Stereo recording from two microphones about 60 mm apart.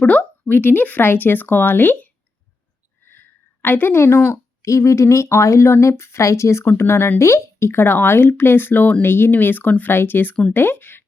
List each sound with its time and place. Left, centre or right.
0.0 s speech: left
3.1 s a sound: left
4.6 s speech: left